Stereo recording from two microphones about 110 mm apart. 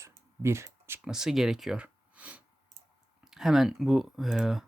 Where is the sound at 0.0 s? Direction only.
25° right (ahead or behind).